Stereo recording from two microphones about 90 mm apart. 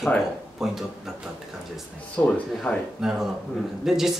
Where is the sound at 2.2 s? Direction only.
10° left (ahead or behind).